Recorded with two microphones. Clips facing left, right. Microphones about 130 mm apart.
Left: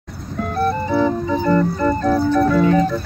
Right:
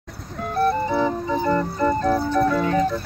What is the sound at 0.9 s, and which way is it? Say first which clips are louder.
Music: left 4 dB; 20° right (ahead or behind).